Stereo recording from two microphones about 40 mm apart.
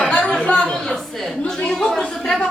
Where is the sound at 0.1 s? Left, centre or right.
Left.